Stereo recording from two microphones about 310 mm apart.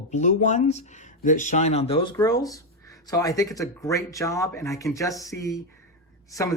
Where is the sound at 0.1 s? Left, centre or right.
Left.